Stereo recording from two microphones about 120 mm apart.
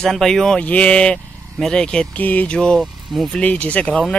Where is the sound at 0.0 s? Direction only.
5° left (ahead or behind).